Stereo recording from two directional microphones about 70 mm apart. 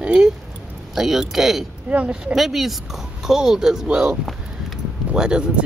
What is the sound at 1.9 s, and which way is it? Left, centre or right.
Speech, centre.